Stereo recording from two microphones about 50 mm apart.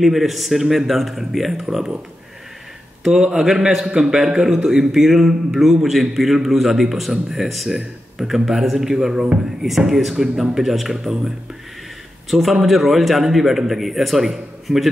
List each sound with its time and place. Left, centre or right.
0.0 s a man's voice: centre
3.0 s a man's voice: centre